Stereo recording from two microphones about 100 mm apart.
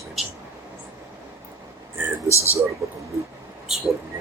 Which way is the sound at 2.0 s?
20° right (ahead or behind).